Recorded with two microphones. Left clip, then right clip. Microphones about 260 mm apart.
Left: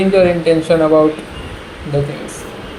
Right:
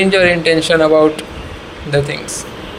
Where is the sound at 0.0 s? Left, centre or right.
Right.